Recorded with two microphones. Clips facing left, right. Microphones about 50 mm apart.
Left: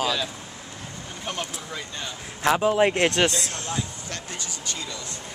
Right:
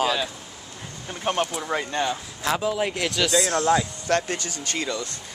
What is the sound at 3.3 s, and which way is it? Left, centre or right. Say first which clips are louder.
Speech: right 10 dB; right.